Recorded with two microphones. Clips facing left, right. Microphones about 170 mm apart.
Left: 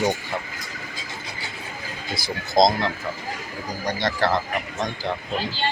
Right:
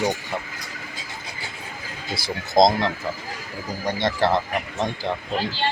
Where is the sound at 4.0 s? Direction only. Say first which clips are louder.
Right 2 dB; 25° right (ahead or behind).